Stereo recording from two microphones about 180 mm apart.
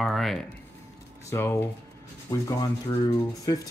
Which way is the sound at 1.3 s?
15° left (ahead or behind).